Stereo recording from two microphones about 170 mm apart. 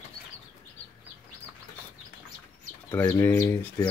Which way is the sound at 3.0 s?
15° left (ahead or behind).